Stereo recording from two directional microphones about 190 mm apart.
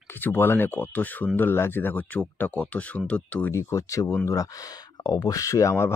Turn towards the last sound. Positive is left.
turn(degrees=15)  # may be behind; listen again after turning